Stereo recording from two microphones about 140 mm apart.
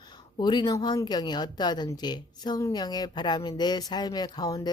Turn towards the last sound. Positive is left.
turn(degrees=30)  # may be behind; listen again after turning